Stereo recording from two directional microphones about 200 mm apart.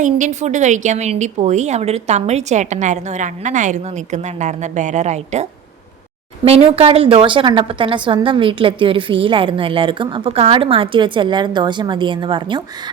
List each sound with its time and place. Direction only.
0.0 s a woman's voice: 35° right (ahead or behind)